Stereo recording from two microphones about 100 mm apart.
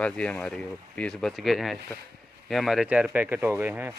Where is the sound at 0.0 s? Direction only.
10° left (ahead or behind); by 3.9 s 20° right (ahead or behind).